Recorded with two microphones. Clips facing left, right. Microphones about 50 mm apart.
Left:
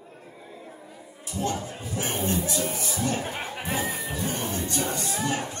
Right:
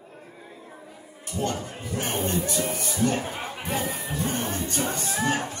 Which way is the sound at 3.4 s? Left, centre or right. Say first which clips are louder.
Even; left.